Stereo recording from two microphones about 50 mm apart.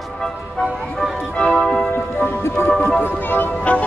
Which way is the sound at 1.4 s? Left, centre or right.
Centre.